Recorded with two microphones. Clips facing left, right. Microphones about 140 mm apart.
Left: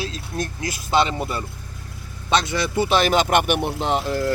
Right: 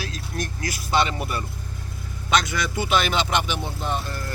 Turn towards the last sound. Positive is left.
turn(degrees=90)